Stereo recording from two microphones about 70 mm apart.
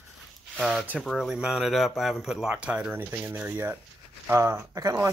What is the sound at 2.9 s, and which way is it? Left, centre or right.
Speech, right.